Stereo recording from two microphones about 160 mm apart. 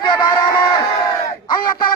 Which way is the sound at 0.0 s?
25° left (ahead or behind).